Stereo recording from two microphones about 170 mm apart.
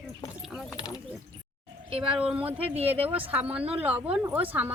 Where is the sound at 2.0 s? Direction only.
5° right (ahead or behind).